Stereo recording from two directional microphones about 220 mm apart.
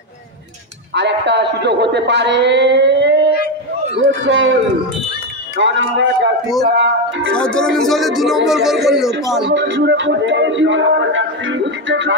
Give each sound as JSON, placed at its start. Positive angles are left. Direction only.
{"t": 0.9, "sound": "a man's voice", "side_deg": -50}
{"t": 3.3, "sound": "a sound", "side_deg": 50}
{"t": 4.0, "sound": "speech", "side_deg": -60}
{"t": 5.6, "sound": "speech", "side_deg": -55}
{"t": 7.3, "sound": "a man's voice", "side_deg": 5}
{"t": 9.4, "sound": "speech", "side_deg": -50}